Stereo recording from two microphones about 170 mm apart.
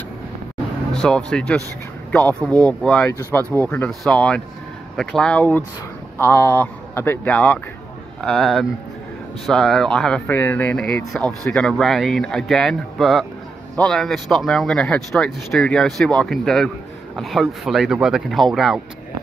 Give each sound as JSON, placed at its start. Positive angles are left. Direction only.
{"t": 0.9, "sound": "speech", "side_deg": 5}
{"t": 11.2, "sound": "speech", "side_deg": 5}